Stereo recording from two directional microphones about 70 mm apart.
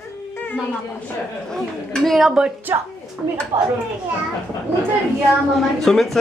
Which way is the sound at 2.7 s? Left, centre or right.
Right.